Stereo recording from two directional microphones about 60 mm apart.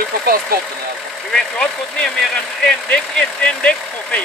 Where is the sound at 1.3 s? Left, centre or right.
Centre.